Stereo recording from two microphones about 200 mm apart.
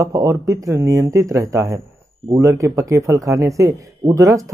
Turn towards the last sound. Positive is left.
turn(degrees=-15)  # may be behind; listen again after turning